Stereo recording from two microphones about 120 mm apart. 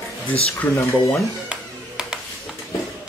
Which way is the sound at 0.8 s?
25° left (ahead or behind).